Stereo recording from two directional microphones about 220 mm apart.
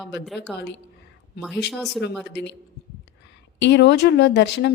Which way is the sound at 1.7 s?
Centre (ahead or behind).